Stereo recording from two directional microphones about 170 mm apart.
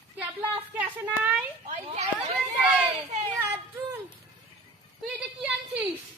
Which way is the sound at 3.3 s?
10° right (ahead or behind).